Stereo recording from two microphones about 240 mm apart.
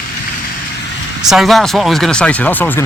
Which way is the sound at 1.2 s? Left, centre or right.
Centre.